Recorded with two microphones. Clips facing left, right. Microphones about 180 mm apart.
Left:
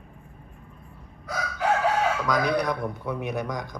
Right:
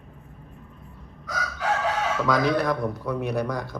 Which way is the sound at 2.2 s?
10° left (ahead or behind).